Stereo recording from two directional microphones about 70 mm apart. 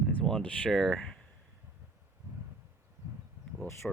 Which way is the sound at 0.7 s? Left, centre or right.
Centre.